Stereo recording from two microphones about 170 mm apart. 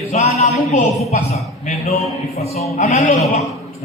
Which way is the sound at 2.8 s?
40° left (ahead or behind).